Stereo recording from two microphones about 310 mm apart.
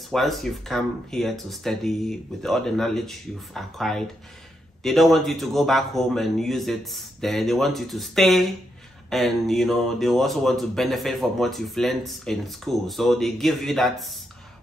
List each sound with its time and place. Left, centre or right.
0.1 s speech: centre